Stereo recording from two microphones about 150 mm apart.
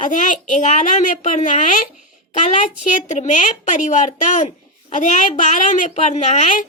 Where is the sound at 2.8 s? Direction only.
50° left (ahead or behind).